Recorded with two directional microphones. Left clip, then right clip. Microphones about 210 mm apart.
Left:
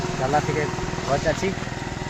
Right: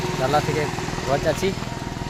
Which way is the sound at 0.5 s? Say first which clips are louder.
Right 1 dB; 55° right (ahead or behind).